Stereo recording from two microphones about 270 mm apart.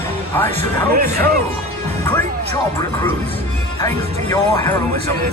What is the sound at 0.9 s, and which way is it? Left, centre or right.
Speech, right.